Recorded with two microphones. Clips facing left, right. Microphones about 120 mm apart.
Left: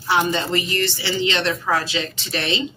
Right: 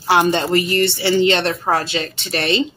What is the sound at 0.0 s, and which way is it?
Speech, 70° right (ahead or behind).